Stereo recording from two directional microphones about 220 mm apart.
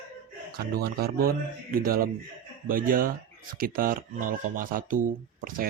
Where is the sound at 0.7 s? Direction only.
45° right (ahead or behind).